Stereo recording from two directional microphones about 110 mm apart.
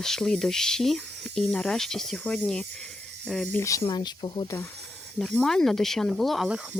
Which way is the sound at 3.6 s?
30° left (ahead or behind).